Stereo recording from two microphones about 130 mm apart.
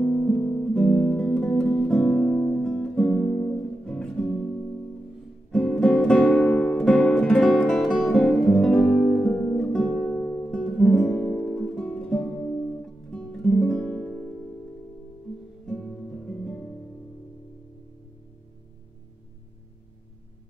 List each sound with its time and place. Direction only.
0.0 s music: 10° left (ahead or behind)
5.5 s music: 5° left (ahead or behind)
15.6 s music: 10° left (ahead or behind)